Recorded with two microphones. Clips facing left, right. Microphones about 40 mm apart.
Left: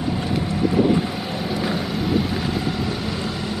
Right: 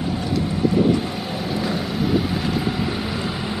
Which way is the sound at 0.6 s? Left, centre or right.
Centre.